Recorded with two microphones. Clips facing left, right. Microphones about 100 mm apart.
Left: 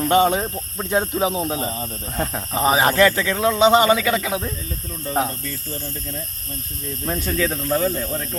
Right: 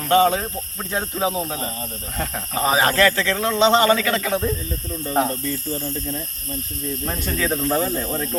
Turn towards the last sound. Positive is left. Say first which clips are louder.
# even
turn(degrees=-10)  # may be behind; listen again after turning